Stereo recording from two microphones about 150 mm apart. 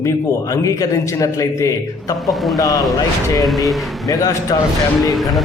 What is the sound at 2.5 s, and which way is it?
Speech, 25° left (ahead or behind).